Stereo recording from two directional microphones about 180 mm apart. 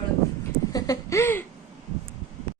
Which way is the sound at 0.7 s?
20° left (ahead or behind).